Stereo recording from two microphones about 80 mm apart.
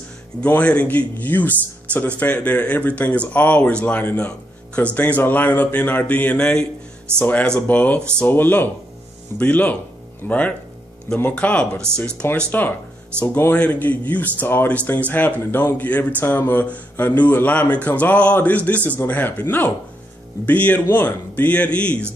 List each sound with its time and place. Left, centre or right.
0.5 s speech: centre
7.1 s speech: right
7.6 s speech: centre